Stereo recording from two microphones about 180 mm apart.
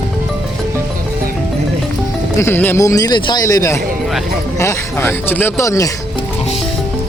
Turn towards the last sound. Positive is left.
turn(degrees=15)  # may be behind; listen again after turning